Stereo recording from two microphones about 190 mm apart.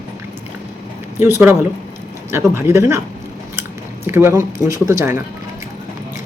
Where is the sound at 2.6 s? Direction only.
15° right (ahead or behind).